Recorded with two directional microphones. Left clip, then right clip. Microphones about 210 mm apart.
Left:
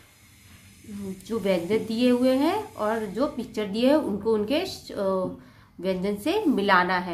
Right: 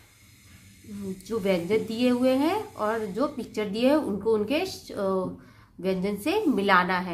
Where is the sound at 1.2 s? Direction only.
5° right (ahead or behind).